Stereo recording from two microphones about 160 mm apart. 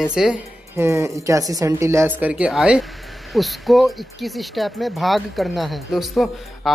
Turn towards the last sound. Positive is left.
turn(degrees=0)  # may be behind; listen again after turning